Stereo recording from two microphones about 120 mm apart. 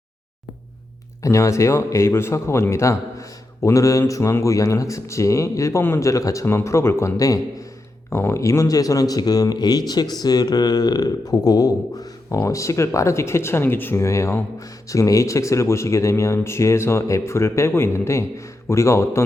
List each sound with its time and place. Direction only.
1.2 s speech: 25° left (ahead or behind)